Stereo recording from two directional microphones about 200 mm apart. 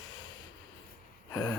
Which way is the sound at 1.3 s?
15° left (ahead or behind).